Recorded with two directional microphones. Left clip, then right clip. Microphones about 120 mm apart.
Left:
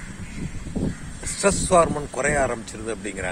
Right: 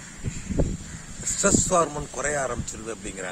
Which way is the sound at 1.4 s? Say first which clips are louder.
Left 4 dB; 15° right (ahead or behind).